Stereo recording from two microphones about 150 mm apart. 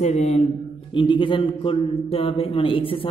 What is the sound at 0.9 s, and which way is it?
Mantra, 35° left (ahead or behind).